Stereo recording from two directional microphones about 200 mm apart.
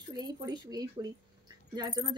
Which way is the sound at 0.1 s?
20° right (ahead or behind).